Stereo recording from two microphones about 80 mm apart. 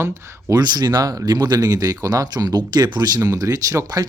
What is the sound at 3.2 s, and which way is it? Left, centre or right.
Speech, right.